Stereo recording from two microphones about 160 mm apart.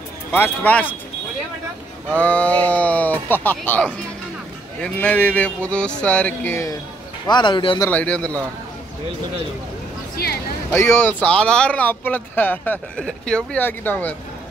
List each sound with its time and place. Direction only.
0.3 s speech: 10° left (ahead or behind)
2.1 s speech: 10° left (ahead or behind)
7.2 s a man's voice: 30° left (ahead or behind)
7.9 s speech: 10° left (ahead or behind)
10.1 s speech: 75° left (ahead or behind)
10.7 s speech: 15° left (ahead or behind)